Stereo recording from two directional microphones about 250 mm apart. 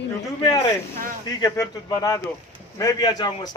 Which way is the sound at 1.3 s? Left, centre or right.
Centre.